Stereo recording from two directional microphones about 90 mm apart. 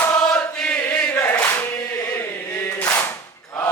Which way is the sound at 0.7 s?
20° left (ahead or behind).